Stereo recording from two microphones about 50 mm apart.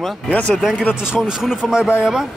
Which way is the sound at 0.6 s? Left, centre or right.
Centre.